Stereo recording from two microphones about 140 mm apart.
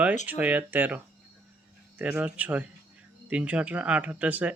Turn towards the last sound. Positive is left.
turn(degrees=-10)  # may be behind; listen again after turning